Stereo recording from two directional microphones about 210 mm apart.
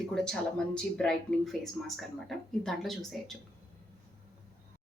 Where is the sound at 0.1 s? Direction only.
5° left (ahead or behind).